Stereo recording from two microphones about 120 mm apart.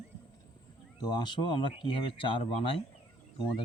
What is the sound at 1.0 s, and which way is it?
A man's voice, 35° left (ahead or behind).